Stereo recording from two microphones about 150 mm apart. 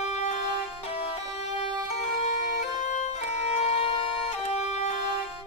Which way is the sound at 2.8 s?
50° left (ahead or behind).